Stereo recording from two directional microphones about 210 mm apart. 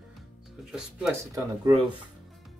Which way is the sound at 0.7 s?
5° right (ahead or behind).